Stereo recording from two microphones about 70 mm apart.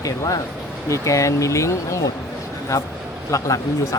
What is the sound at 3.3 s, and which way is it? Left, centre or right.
Speech, left.